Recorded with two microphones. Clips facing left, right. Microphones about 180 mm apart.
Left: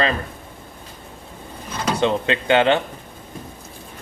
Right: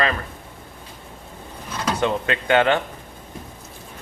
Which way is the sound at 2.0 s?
25° left (ahead or behind).